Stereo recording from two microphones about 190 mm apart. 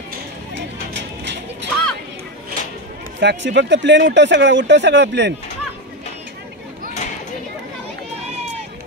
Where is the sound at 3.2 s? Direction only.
70° right (ahead or behind).